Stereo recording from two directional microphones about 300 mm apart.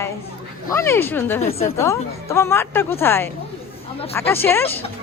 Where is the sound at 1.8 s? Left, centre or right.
Centre.